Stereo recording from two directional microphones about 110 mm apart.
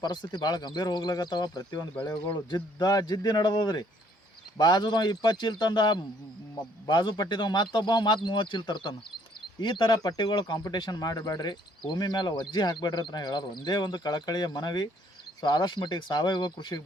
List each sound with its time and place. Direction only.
0.0 s speech: 40° left (ahead or behind)